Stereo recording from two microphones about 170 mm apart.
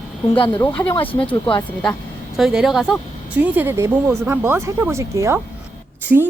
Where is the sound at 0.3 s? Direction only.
30° left (ahead or behind).